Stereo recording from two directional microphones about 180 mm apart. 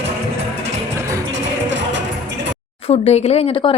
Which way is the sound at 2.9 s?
35° left (ahead or behind).